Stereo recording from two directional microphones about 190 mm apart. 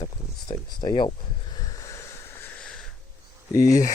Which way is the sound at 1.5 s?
15° left (ahead or behind).